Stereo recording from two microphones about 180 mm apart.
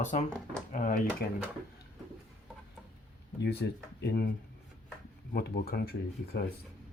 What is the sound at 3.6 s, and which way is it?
Speech, 75° left (ahead or behind).